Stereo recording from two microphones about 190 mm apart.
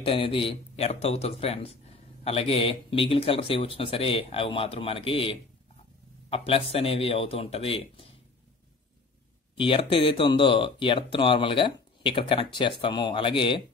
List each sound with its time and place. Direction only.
0.0 s speech: 30° left (ahead or behind)
9.6 s speech: 30° left (ahead or behind)